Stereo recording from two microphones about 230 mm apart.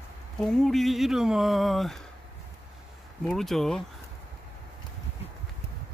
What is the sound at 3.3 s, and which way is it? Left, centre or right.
Speech, centre.